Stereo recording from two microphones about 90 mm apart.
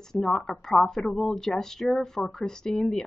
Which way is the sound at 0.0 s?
5° left (ahead or behind).